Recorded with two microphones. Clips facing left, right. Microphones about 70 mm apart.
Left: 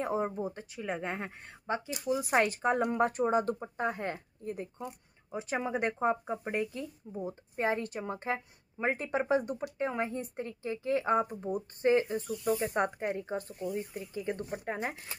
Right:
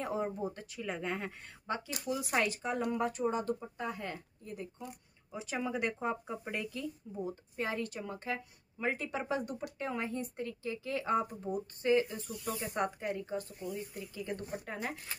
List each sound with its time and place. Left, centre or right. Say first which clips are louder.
0.0 s speech: left 3 dB; left